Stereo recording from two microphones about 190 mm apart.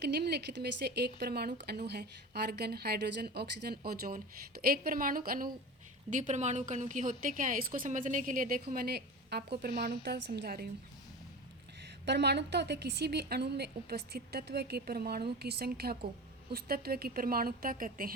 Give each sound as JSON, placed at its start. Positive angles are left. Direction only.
{"t": 0.0, "sound": "a woman's voice", "side_deg": -60}
{"t": 12.0, "sound": "a woman's voice", "side_deg": -60}